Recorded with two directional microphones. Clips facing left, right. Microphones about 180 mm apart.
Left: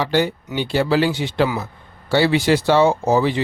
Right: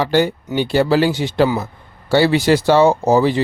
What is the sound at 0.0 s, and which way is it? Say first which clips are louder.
A man's voice: right 3 dB; 45° right (ahead or behind).